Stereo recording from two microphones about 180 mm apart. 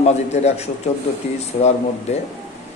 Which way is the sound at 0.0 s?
40° left (ahead or behind).